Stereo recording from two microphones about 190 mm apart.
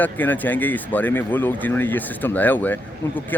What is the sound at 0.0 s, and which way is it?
Speech, 10° left (ahead or behind).